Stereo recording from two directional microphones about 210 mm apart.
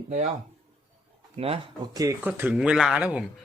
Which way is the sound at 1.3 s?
25° right (ahead or behind).